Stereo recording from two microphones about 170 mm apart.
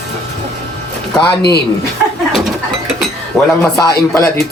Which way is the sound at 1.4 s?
75° left (ahead or behind).